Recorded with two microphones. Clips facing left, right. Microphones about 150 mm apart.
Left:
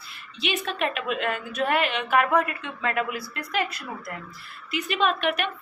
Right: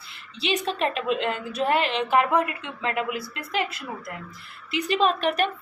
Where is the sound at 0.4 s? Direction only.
30° right (ahead or behind).